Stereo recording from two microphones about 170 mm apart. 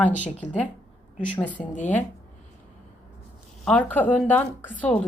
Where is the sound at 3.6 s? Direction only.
10° left (ahead or behind).